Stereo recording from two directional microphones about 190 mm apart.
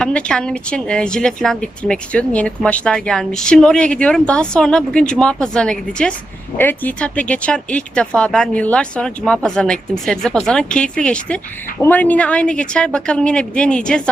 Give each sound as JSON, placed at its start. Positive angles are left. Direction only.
{"t": 0.0, "sound": "speech", "side_deg": 5}